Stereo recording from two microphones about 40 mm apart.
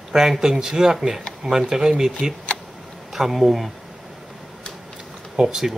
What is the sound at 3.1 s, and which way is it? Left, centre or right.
Speech, centre.